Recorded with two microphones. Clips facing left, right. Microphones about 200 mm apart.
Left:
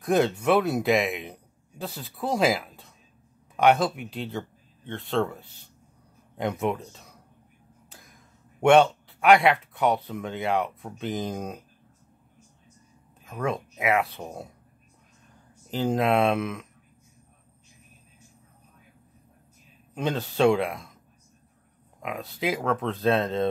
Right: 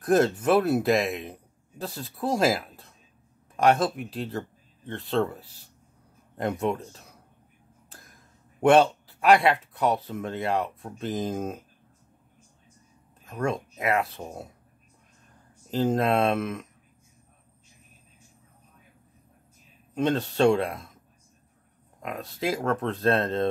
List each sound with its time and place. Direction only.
0.0 s a man's voice: centre (ahead or behind)
13.2 s a man's voice: centre (ahead or behind)
15.7 s a man's voice: centre (ahead or behind)
19.9 s a man's voice: centre (ahead or behind)
22.0 s a man's voice: centre (ahead or behind)